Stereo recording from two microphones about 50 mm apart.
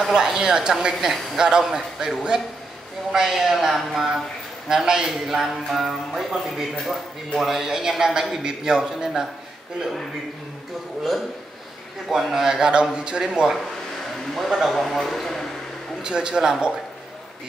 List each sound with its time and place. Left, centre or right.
0.1 s a man's voice: centre
12.1 s a man's voice: centre
13.2 s a man's voice: centre
16.0 s a man's voice: centre